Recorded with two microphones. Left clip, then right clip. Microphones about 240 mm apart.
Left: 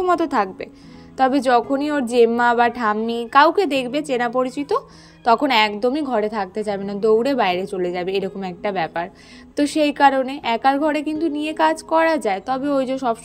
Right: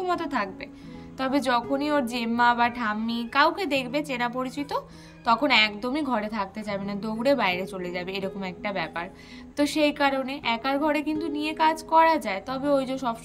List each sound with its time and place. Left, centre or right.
0.0 s a woman's voice: centre